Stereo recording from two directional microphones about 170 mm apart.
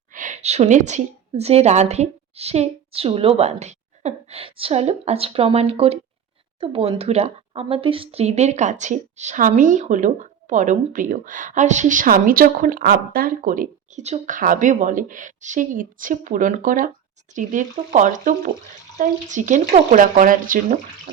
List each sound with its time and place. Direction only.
0.1 s a woman's voice: 50° right (ahead or behind)